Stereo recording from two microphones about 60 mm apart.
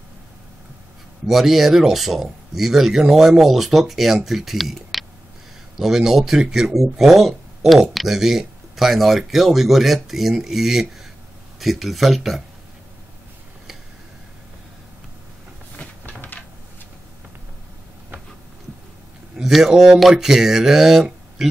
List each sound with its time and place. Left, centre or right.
1.2 s speech: centre
16.2 s a sound: left
19.3 s speech: centre